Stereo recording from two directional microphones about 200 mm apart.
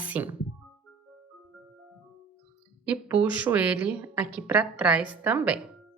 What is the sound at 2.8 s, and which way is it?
A woman's voice, 5° right (ahead or behind).